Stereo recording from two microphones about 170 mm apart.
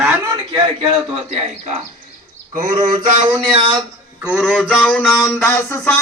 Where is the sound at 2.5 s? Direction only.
50° right (ahead or behind).